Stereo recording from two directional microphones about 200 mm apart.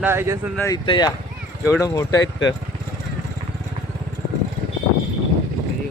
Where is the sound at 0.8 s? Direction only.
20° left (ahead or behind).